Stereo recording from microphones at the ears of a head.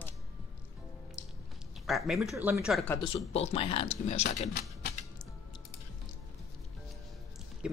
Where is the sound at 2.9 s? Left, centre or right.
Left.